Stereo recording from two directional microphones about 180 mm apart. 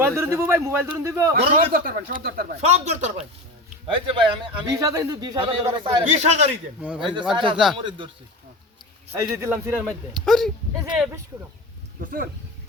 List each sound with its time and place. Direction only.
0.0 s speech: 15° right (ahead or behind)
1.5 s speech: 50° right (ahead or behind)
2.6 s speech: 40° right (ahead or behind)
3.8 s a man's voice: 25° right (ahead or behind)
6.1 s speech: 40° right (ahead or behind)
7.0 s a man's voice: 25° right (ahead or behind)
9.3 s speech: 15° right (ahead or behind)
10.2 s speech: centre (ahead or behind)
11.9 s speech: 50° right (ahead or behind)